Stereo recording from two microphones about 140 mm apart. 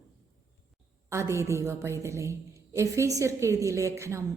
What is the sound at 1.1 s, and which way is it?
A woman's voice, 20° right (ahead or behind).